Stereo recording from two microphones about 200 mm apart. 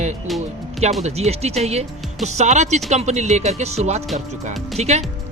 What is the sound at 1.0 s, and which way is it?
Speech, 30° right (ahead or behind).